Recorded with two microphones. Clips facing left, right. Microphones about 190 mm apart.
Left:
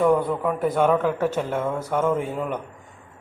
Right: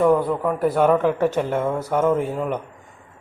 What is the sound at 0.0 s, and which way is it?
Speech, centre (ahead or behind).